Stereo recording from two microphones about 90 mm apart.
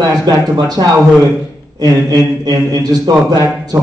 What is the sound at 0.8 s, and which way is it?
A man's voice, 55° right (ahead or behind).